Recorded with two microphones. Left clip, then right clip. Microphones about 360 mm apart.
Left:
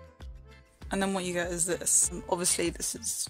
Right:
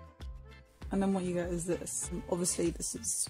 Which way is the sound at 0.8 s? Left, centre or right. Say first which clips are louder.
Left 3 dB; left.